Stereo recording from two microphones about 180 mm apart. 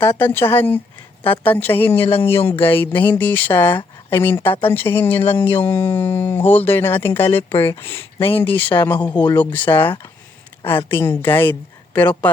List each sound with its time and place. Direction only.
0.0 s speech: 10° left (ahead or behind)
7.5 s speech: 30° left (ahead or behind)
7.8 s speech: 15° left (ahead or behind)
9.1 s speech: 25° left (ahead or behind)
9.4 s speech: 10° left (ahead or behind)